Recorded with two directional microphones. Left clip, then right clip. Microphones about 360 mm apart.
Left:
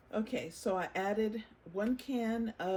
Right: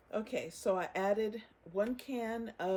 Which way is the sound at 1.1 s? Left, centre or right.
Centre.